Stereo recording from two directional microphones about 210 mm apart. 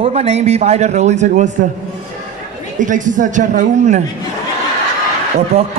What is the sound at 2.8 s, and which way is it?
A man's voice, 35° right (ahead or behind).